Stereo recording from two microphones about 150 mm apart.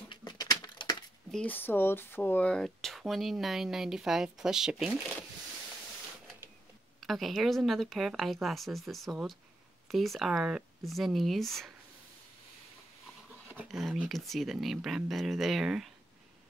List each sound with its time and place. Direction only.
0.1 s a sound: 30° left (ahead or behind)
1.3 s speech: 10° left (ahead or behind); by 5.0 s 5° right (ahead or behind)
7.0 s speech: centre (ahead or behind)
13.7 s speech: centre (ahead or behind)